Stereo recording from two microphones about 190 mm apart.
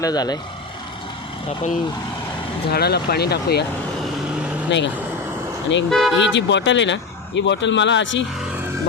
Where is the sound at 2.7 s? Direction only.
55° left (ahead or behind).